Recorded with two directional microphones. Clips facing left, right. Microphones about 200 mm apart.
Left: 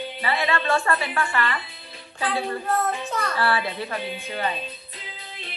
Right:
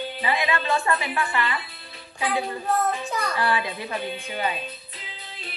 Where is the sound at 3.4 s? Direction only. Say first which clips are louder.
Left 2 dB; 15° right (ahead or behind).